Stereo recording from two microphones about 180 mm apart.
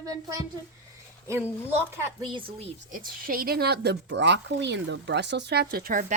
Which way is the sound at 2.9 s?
50° right (ahead or behind).